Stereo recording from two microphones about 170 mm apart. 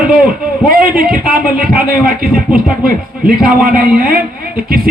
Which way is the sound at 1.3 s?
60° right (ahead or behind).